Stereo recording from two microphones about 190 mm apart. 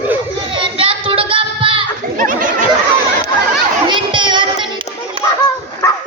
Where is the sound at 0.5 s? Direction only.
25° right (ahead or behind).